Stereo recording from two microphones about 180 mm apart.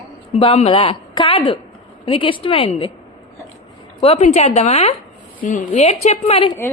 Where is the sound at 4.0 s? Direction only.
35° left (ahead or behind).